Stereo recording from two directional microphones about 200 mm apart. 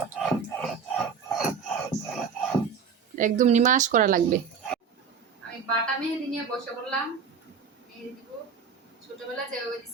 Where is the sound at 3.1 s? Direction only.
40° right (ahead or behind).